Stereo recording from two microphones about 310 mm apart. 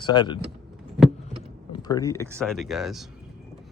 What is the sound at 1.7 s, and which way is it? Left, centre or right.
Speech, centre.